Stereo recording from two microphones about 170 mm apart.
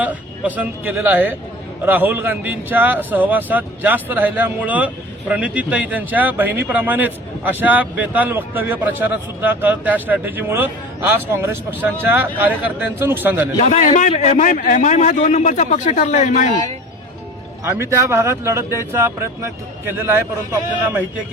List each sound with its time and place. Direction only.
0.0 s speech: 10° right (ahead or behind)
13.6 s a man's voice: 45° left (ahead or behind)
17.6 s speech: 15° right (ahead or behind)